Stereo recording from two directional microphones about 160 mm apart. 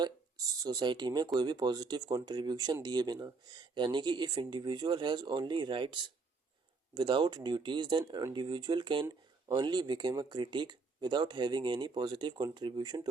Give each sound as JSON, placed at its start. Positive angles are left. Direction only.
{"t": 0.0, "sound": "speech", "side_deg": -25}